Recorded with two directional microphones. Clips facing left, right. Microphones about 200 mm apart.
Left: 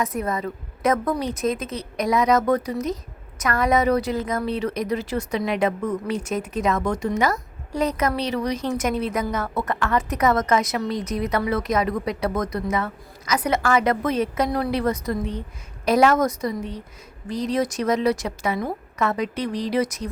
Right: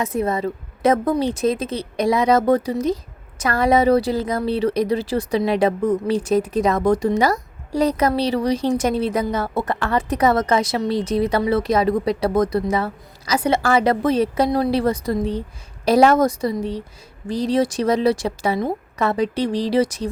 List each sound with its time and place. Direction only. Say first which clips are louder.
0.0 s a woman's voice: right 4 dB; 25° right (ahead or behind)